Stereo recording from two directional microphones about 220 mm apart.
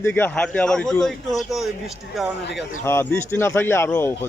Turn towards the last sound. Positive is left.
turn(degrees=10)  # may be behind; listen again after turning